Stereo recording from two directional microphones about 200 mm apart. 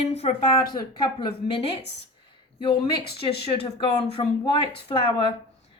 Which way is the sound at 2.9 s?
55° left (ahead or behind).